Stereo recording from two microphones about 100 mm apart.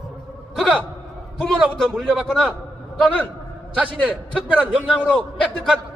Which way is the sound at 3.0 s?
15° left (ahead or behind).